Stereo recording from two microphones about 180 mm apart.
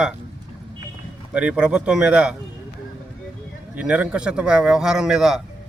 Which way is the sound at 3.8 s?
5° right (ahead or behind).